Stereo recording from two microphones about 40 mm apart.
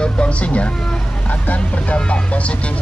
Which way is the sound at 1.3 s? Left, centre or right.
Left.